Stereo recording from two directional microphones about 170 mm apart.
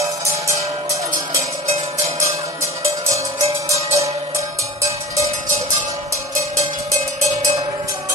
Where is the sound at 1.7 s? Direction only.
40° right (ahead or behind).